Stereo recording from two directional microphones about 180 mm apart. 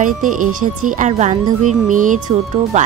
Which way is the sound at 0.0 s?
45° right (ahead or behind).